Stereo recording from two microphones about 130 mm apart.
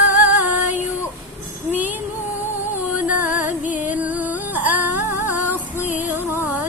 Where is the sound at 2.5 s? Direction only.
15° right (ahead or behind).